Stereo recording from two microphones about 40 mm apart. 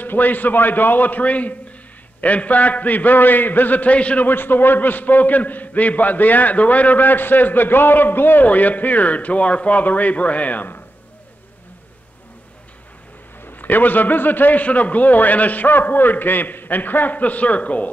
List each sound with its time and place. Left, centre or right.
0.0 s a man's voice: left
4.3 s a man's voice: left
8.5 s speech: left
13.4 s a man's voice: left